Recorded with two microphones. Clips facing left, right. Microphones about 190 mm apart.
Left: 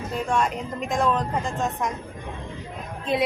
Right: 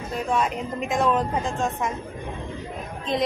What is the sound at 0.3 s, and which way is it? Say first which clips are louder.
Speech: right 1 dB; centre (ahead or behind).